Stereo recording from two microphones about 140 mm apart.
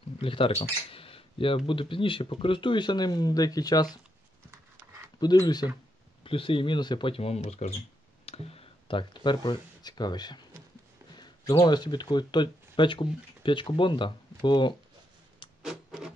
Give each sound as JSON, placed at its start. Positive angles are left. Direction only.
{"t": 0.2, "sound": "speech", "side_deg": 40}
{"t": 4.5, "sound": "dog", "side_deg": -15}
{"t": 5.2, "sound": "speech", "side_deg": 30}
{"t": 6.2, "sound": "speech", "side_deg": 40}
{"t": 15.6, "sound": "a sound", "side_deg": -5}